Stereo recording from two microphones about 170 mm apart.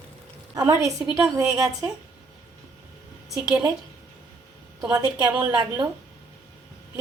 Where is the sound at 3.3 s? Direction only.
5° right (ahead or behind).